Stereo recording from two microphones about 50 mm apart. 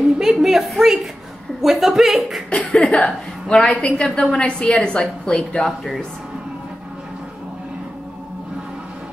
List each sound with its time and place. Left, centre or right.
0.2 s a woman's voice: centre
2.5 s cough: left
3.1 s a woman's voice: centre